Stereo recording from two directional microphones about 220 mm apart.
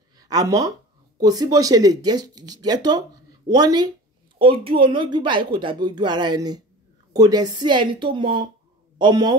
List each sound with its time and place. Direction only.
0.2 s a woman's voice: 15° right (ahead or behind)